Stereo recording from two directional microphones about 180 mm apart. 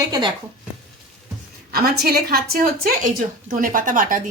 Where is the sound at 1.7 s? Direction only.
60° right (ahead or behind).